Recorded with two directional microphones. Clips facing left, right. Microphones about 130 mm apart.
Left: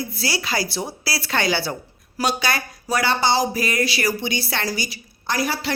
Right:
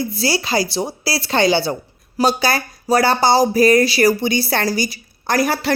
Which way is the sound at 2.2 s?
35° right (ahead or behind).